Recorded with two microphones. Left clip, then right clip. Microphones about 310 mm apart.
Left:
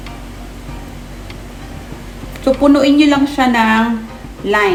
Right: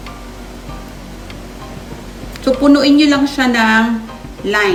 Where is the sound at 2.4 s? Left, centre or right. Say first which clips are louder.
Even; centre.